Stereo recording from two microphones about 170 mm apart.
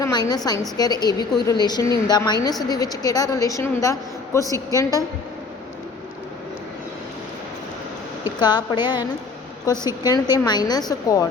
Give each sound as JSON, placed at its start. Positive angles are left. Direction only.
{"t": 0.0, "sound": "a woman's voice", "side_deg": 25}
{"t": 8.4, "sound": "a woman's voice", "side_deg": 25}